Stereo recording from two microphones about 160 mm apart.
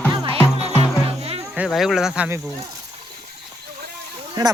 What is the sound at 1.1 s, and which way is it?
Insect, 40° right (ahead or behind).